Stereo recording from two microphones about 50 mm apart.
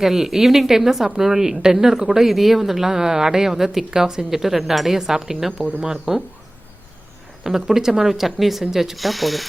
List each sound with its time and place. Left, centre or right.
0.0 s a woman's voice: centre
7.4 s speech: centre